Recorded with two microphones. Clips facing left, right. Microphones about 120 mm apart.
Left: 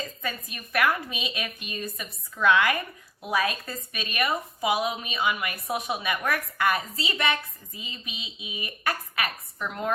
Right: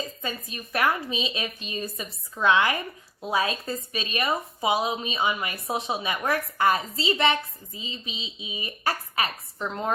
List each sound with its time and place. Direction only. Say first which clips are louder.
0.2 s a woman's voice: right 1 dB; 25° right (ahead or behind)